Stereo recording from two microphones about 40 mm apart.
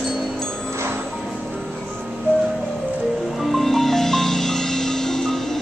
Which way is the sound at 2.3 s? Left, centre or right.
Right.